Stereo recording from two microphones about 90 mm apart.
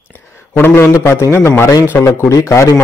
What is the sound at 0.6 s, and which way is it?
A man's voice, 25° left (ahead or behind).